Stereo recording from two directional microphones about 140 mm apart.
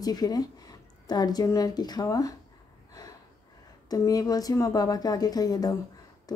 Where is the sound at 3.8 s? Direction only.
25° left (ahead or behind).